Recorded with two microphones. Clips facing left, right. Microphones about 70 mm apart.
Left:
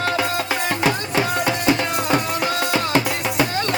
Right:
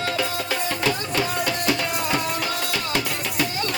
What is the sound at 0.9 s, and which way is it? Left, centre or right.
Music, left.